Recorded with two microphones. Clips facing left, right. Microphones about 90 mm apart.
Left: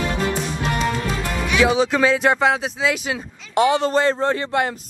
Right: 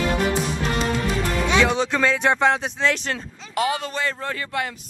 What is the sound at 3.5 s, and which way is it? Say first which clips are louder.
Speech: left 7 dB; 30° left (ahead or behind).